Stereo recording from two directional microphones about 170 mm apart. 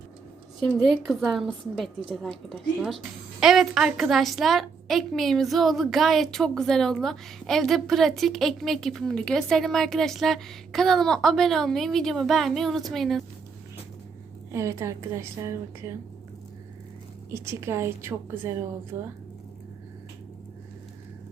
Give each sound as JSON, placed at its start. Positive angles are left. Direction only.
{"t": 0.6, "sound": "a woman's voice", "side_deg": 0}
{"t": 14.5, "sound": "a woman's voice", "side_deg": -15}
{"t": 17.3, "sound": "a woman's voice", "side_deg": -15}